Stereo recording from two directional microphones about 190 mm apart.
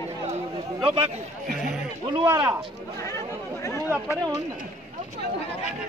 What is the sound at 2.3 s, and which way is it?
Speech, 15° right (ahead or behind).